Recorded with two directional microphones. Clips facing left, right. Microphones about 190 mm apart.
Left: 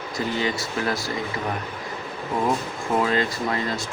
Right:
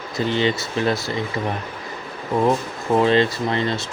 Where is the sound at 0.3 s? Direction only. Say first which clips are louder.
Right 6 dB; 25° right (ahead or behind).